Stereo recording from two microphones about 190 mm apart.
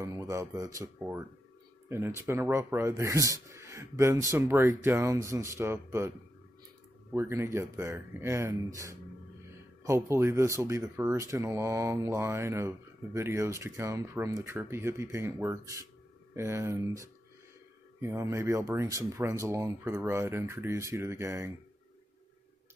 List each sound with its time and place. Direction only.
0.0 s speech: 15° right (ahead or behind)
9.8 s speech: 15° right (ahead or behind)